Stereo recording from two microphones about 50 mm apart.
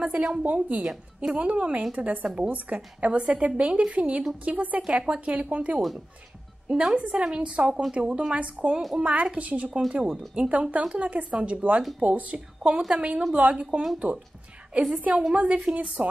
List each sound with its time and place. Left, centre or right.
0.0 s a woman's voice: centre
6.7 s a woman's voice: centre
9.7 s speech: centre
9.9 s a woman's voice: right
15.0 s a woman's voice: right
15.2 s a woman's voice: centre